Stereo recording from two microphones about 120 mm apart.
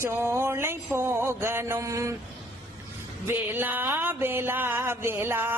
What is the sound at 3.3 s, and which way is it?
Music, 15° right (ahead or behind).